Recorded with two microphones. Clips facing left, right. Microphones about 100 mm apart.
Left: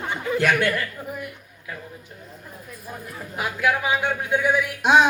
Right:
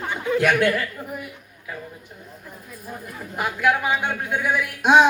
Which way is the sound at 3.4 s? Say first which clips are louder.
Right 2 dB; centre (ahead or behind).